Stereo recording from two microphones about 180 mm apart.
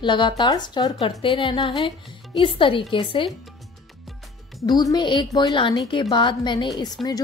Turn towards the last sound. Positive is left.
turn(degrees=0)  # may be behind; listen again after turning